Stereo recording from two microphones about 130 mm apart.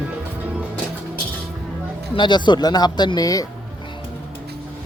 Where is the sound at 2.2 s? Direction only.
35° left (ahead or behind).